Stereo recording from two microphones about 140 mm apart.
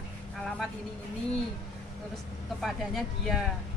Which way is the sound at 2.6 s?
Centre (ahead or behind).